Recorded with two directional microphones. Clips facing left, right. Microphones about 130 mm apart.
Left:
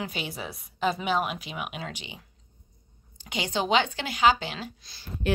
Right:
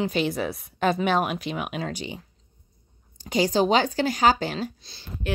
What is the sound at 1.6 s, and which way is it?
A woman's voice, 40° right (ahead or behind).